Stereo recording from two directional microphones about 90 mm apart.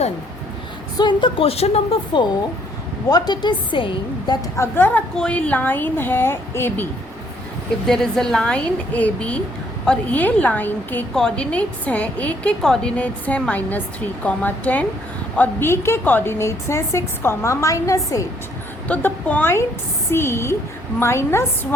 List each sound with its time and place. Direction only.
0.9 s a woman's voice: 60° left (ahead or behind); by 2.2 s 85° left
3.1 s a woman's voice: 50° left (ahead or behind); by 4.4 s 65° left (ahead or behind)
4.5 s speech: 30° left (ahead or behind)
4.9 s speech: 15° left (ahead or behind)
7.9 s a woman's voice: 5° left (ahead or behind)
11.1 s a woman's voice: 5° left (ahead or behind)
11.5 s a woman's voice: 15° left (ahead or behind)
13.0 s a woman's voice: 15° left (ahead or behind); by 18.3 s 35° left (ahead or behind)
18.9 s speech: 20° left (ahead or behind)